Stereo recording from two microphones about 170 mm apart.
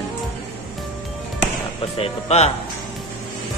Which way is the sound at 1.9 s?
35° left (ahead or behind).